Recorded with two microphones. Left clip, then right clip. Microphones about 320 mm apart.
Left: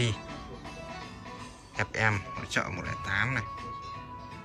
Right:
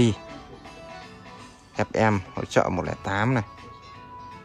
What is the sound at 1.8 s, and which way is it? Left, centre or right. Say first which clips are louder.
Speech: right 6 dB; centre.